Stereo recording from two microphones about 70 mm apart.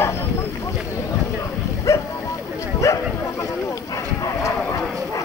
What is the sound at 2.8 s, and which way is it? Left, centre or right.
Bow-wow, left.